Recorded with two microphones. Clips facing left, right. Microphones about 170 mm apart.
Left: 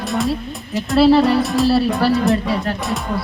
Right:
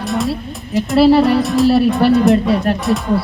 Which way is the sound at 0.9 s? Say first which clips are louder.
Right 2 dB; 10° right (ahead or behind).